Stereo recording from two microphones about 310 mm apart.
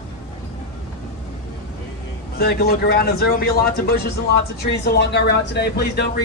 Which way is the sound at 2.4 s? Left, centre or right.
Left.